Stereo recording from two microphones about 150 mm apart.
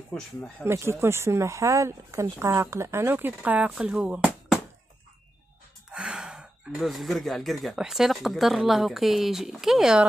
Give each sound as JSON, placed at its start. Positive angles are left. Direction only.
{"t": 0.1, "sound": "speech", "side_deg": 5}
{"t": 0.7, "sound": "speech", "side_deg": -15}
{"t": 5.9, "sound": "speech", "side_deg": -5}